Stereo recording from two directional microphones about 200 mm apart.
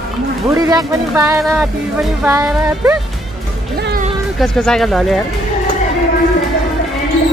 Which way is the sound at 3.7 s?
50° right (ahead or behind).